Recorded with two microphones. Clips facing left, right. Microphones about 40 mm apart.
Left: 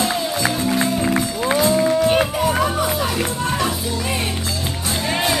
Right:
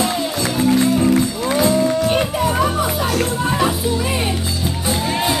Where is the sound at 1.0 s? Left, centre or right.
Centre.